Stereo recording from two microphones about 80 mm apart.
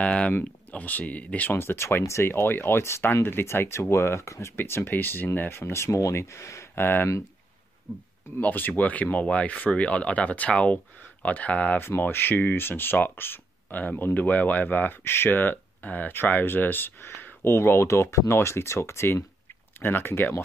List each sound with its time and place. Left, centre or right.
0.0 s speech: centre
8.4 s speech: left
11.8 s speech: left